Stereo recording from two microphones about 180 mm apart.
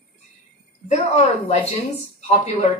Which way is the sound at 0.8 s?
40° left (ahead or behind).